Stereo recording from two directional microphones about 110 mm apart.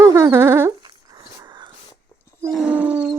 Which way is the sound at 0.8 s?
40° right (ahead or behind).